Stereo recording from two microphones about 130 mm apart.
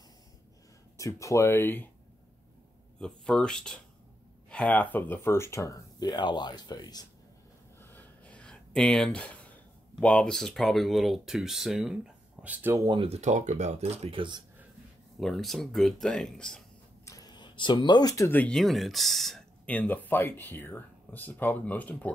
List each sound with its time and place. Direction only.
0.9 s speech: 25° left (ahead or behind)
3.0 s speech: 5° left (ahead or behind); by 7.1 s 30° left (ahead or behind)
7.8 s a sound: 10° left (ahead or behind)
9.9 s speech: 10° left (ahead or behind); by 12.7 s 10° right (ahead or behind)
12.7 s speech: 35° right (ahead or behind)
13.1 s speech: 65° right (ahead or behind); by 14.4 s 40° right (ahead or behind)
15.1 s speech: centre (ahead or behind)
17.0 s a sound: 25° left (ahead or behind)
18.3 s speech: 10° left (ahead or behind)
18.6 s speech: centre (ahead or behind)